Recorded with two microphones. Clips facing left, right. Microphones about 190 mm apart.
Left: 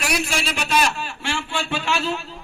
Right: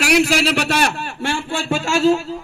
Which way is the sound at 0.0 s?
80° right.